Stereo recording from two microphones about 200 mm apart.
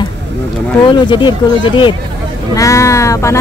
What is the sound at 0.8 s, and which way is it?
Speech, 25° left (ahead or behind).